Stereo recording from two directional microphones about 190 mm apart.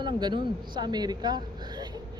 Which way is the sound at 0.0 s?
25° right (ahead or behind).